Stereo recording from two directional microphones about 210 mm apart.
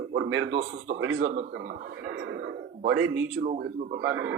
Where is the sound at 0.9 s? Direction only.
50° right (ahead or behind).